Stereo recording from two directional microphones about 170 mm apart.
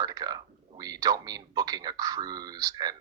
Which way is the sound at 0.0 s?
20° right (ahead or behind).